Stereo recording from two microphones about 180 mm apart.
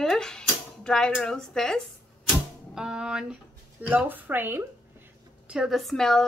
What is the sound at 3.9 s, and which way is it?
A woman's voice, 10° right (ahead or behind).